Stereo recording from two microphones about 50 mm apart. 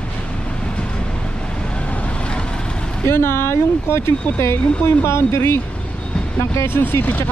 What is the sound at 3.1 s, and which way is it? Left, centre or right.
Speech, left.